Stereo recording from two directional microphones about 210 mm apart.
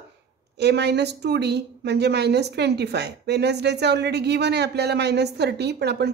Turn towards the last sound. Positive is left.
turn(degrees=-50)  # may be behind; listen again after turning